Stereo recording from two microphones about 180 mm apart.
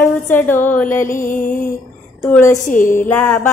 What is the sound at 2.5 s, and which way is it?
Music, 45° left (ahead or behind).